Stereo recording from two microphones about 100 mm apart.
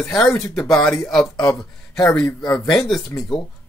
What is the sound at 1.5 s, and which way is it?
Speech, 5° left (ahead or behind).